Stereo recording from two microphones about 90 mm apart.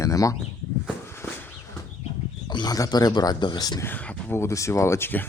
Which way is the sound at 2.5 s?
50° left (ahead or behind).